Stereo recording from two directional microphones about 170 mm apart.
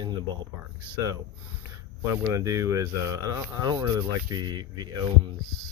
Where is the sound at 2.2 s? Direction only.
20° right (ahead or behind).